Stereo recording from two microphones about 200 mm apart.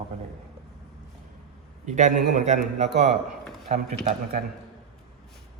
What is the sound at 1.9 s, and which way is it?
A man's voice, 40° right (ahead or behind).